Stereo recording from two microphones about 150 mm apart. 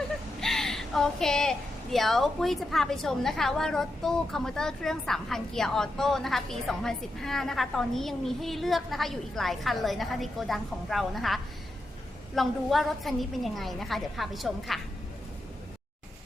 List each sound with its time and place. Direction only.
0.3 s a woman's voice: 5° left (ahead or behind)